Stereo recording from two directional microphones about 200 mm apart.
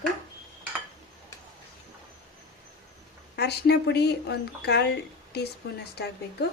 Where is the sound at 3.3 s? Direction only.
55° left (ahead or behind).